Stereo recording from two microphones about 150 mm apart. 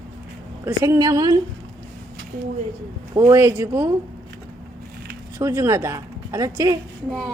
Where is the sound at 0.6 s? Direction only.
20° right (ahead or behind).